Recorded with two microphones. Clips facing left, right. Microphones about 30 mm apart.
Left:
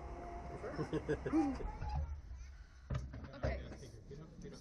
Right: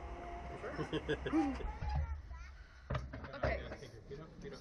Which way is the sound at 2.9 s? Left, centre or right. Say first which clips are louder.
Right 4 dB; right.